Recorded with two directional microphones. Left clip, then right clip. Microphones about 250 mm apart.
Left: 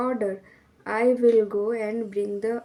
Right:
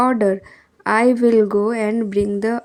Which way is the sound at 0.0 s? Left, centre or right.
Right.